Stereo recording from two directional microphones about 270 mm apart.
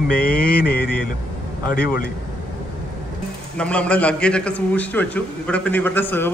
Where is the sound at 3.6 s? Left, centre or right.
Centre.